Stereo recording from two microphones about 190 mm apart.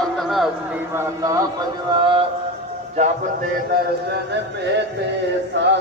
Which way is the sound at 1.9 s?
25° right (ahead or behind).